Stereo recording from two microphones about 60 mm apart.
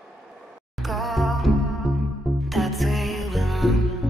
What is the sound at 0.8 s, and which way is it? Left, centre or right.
Music, centre.